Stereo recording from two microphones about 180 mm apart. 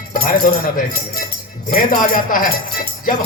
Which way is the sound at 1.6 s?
50° left (ahead or behind).